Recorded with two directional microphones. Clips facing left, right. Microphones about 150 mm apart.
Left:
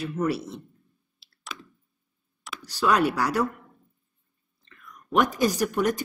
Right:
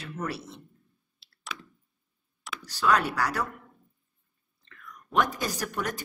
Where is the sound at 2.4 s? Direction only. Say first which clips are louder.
Even; centre (ahead or behind).